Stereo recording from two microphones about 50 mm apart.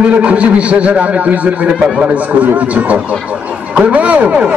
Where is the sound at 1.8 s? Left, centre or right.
Centre.